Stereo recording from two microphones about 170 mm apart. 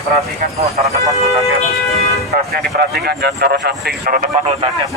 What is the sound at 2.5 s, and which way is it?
Speech, 65° right (ahead or behind).